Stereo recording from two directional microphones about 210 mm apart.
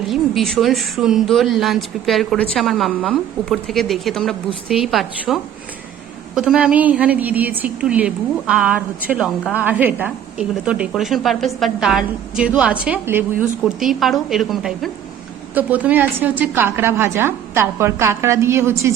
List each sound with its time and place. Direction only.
0.1 s a woman's voice: centre (ahead or behind)